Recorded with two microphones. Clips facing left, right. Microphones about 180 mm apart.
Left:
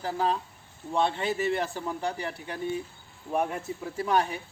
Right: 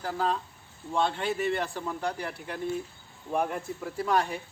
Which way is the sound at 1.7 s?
5° left (ahead or behind).